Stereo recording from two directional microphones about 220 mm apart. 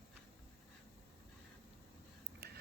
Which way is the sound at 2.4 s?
45° right (ahead or behind).